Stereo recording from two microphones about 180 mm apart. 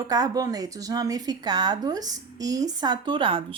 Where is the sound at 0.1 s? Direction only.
20° right (ahead or behind).